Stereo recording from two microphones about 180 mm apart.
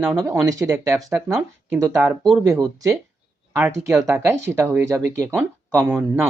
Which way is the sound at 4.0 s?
15° right (ahead or behind).